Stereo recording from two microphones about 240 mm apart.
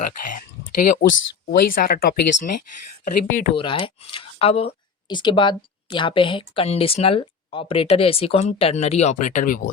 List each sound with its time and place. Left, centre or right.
0.0 s speech: left